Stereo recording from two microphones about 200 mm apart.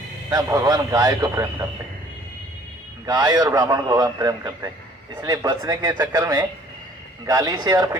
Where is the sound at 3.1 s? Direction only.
20° right (ahead or behind).